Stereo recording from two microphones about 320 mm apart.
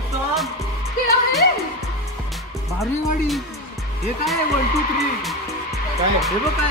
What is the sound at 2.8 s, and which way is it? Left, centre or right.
Speech, centre.